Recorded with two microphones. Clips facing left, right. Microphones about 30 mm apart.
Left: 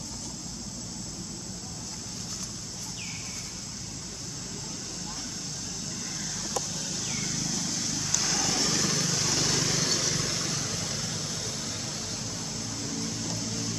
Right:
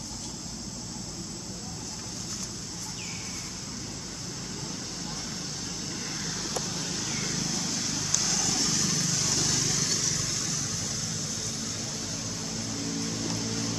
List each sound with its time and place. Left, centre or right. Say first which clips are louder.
6.5 s vehicle: right 1 dB; centre
8.1 s vehicle: left 1 dB; centre
12.5 s music: right 3 dB; centre